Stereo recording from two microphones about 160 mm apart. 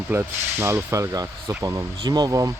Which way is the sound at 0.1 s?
15° right (ahead or behind).